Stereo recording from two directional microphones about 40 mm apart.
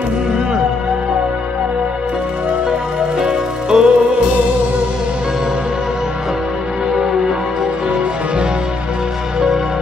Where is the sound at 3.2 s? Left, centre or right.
Centre.